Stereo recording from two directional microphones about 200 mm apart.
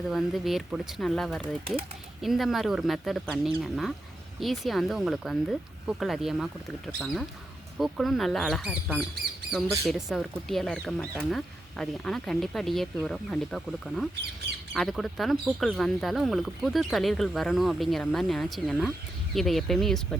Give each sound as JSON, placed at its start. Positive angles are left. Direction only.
{"t": 0.1, "sound": "speech", "side_deg": 0}
{"t": 1.4, "sound": "speech", "side_deg": -30}
{"t": 2.2, "sound": "speech", "side_deg": 0}